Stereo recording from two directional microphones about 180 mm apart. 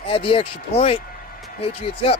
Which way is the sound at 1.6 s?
30° left (ahead or behind).